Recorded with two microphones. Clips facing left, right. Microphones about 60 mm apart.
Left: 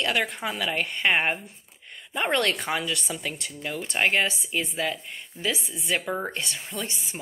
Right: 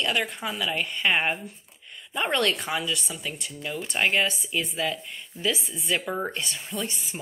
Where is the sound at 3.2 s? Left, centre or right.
Left.